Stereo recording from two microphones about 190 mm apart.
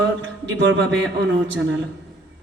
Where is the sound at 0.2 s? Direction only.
80° right.